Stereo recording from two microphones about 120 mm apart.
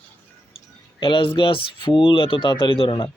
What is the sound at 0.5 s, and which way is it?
Speech, 45° left (ahead or behind).